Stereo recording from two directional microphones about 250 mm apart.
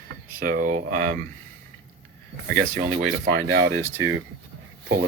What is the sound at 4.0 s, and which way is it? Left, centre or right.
Speech, right.